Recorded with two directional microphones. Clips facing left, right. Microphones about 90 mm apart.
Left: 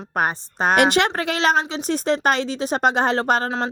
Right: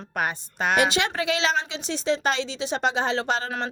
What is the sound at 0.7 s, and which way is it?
A woman's voice, 55° left (ahead or behind).